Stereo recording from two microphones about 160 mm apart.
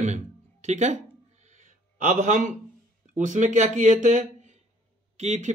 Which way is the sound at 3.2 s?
50° right (ahead or behind).